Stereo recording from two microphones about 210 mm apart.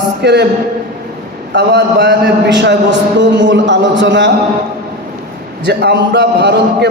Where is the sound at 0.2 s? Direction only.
55° right (ahead or behind).